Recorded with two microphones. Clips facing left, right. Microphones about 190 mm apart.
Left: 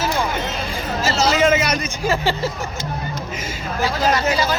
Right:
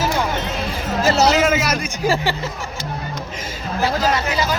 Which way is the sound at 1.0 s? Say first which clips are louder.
Right 4 dB; 65° right (ahead or behind).